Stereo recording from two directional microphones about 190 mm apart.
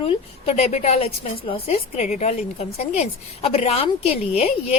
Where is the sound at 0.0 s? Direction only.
35° left (ahead or behind).